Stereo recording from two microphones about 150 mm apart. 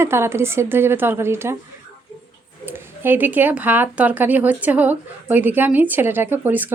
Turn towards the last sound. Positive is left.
turn(degrees=-10)  # may be behind; listen again after turning